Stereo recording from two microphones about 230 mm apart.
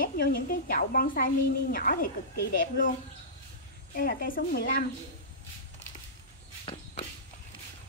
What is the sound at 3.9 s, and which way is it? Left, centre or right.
Speech, left.